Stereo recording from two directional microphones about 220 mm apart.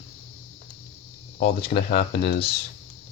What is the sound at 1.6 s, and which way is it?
Speech, 45° left (ahead or behind).